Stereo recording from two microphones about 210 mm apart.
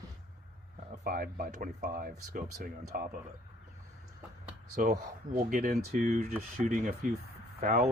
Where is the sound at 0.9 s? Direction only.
40° right (ahead or behind).